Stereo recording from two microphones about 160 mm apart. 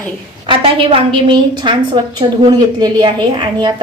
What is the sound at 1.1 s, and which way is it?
A woman's voice, 30° right (ahead or behind).